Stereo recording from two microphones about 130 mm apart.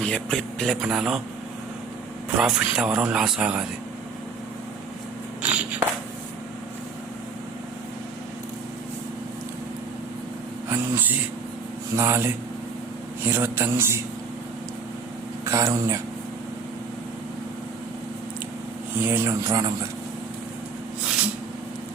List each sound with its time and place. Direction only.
0.0 s a man's voice: 5° left (ahead or behind)
2.3 s a man's voice: 5° right (ahead or behind)
5.4 s a sound: 10° right (ahead or behind)
10.7 s a sound: 15° right (ahead or behind)
11.9 s a man's voice: 20° right (ahead or behind)
15.4 s a man's voice: 25° right (ahead or behind)
18.9 s a man's voice: 15° right (ahead or behind)